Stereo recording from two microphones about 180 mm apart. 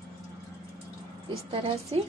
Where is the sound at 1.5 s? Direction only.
30° right (ahead or behind).